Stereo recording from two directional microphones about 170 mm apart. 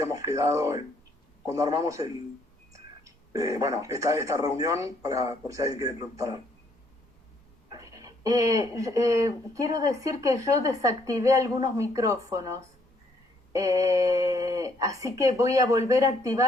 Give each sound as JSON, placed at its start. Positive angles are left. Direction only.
{"t": 0.0, "sound": "speech", "side_deg": -20}
{"t": 7.7, "sound": "speech", "side_deg": -20}